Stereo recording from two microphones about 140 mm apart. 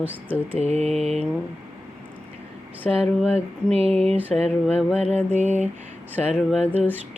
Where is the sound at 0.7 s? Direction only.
50° right (ahead or behind).